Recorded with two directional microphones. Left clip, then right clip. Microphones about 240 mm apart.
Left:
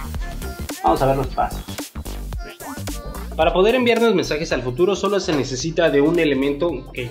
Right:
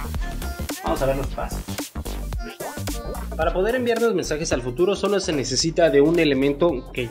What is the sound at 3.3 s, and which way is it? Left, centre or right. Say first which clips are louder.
Speech: left 6 dB; centre.